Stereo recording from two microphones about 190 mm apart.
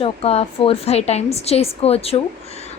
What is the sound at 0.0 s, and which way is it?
A woman's voice, 30° left (ahead or behind).